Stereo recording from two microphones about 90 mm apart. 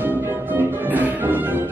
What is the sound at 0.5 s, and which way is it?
Music, 20° right (ahead or behind).